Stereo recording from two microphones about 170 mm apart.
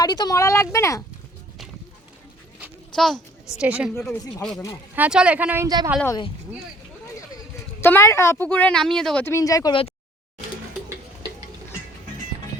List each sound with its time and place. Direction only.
0.0 s speech: 25° left (ahead or behind)
2.9 s a child's voice: centre (ahead or behind)
4.9 s speech: 5° right (ahead or behind)
5.6 s a woman's voice: 20° right (ahead or behind)
7.8 s a woman's voice: 15° left (ahead or behind)
9.2 s speech: 20° left (ahead or behind)